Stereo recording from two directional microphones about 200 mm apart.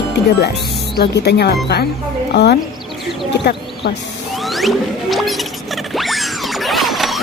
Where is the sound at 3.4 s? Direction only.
55° left (ahead or behind).